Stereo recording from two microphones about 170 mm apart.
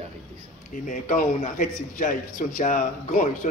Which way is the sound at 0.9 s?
50° left (ahead or behind).